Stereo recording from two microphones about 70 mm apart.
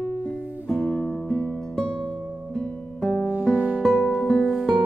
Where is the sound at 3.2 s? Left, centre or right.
Right.